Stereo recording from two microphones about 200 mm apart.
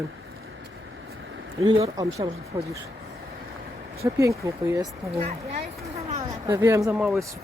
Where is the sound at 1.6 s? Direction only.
20° right (ahead or behind).